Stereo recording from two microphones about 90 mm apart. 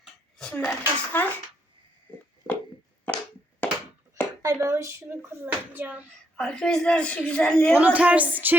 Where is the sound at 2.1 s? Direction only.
20° left (ahead or behind).